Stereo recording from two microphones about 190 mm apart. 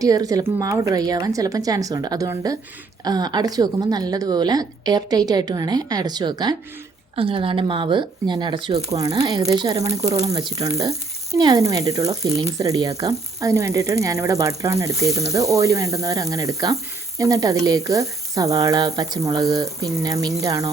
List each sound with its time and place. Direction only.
0.0 s a woman's voice: 20° right (ahead or behind)